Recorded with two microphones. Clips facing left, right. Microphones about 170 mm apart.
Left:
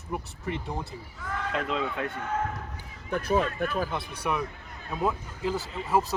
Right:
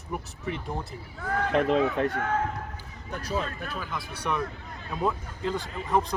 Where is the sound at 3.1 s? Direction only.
55° left (ahead or behind).